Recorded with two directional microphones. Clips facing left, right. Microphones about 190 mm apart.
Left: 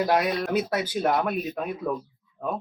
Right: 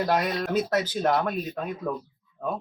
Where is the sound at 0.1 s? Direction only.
10° left (ahead or behind).